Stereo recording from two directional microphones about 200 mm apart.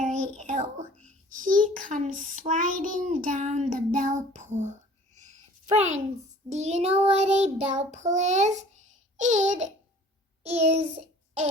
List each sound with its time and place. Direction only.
0.0 s child singing: 40° right (ahead or behind)
5.1 s a sound: 35° right (ahead or behind)
6.5 s child singing: 35° right (ahead or behind)